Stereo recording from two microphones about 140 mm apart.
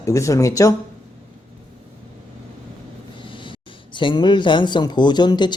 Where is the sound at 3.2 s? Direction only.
35° left (ahead or behind).